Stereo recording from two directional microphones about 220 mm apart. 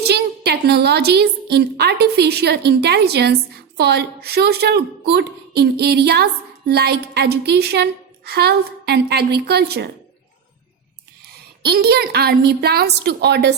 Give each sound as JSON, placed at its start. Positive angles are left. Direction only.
{"t": 0.0, "sound": "a woman's voice", "side_deg": -45}
{"t": 11.6, "sound": "a woman's voice", "side_deg": -45}